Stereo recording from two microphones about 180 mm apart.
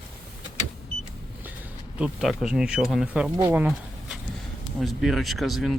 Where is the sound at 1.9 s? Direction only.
Centre (ahead or behind).